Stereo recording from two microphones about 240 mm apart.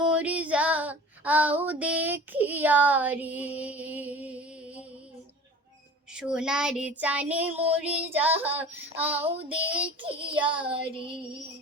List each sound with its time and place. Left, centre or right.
0.0 s female singing: centre
6.1 s child singing: centre
9.2 s child singing: right